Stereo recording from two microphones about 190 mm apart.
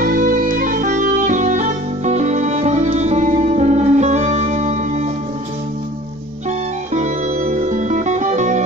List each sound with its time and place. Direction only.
0.0 s music: 45° right (ahead or behind)
6.9 s music: 40° right (ahead or behind)